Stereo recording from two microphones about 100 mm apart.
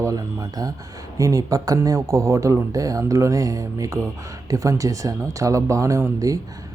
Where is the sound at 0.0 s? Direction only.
35° right (ahead or behind).